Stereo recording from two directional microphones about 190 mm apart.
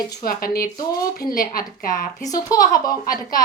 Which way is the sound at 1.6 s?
20° left (ahead or behind).